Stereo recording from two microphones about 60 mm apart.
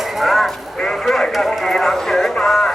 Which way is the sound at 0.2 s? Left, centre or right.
Centre.